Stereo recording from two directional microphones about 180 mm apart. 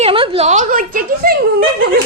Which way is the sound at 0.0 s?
30° right (ahead or behind).